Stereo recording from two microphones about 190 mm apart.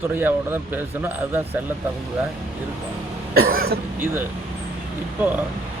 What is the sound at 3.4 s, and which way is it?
Speech, 50° right (ahead or behind).